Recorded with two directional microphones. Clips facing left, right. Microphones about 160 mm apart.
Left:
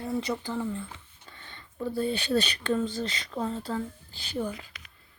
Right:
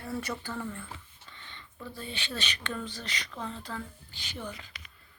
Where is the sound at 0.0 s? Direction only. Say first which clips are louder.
Left 5 dB; 15° left (ahead or behind).